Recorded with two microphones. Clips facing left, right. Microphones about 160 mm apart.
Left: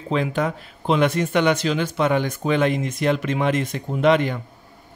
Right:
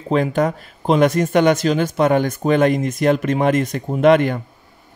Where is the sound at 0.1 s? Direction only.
45° right (ahead or behind).